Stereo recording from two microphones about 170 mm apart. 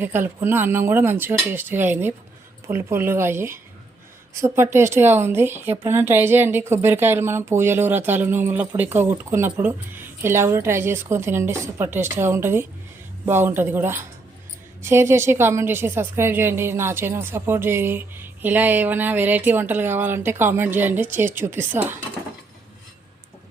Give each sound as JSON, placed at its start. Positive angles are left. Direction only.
{"t": 0.0, "sound": "a woman's voice", "side_deg": -15}